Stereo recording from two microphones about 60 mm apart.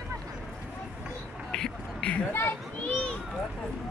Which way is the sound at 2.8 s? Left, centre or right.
Centre.